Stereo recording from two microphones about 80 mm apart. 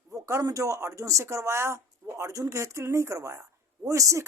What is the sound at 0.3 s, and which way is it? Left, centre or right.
Speech, right.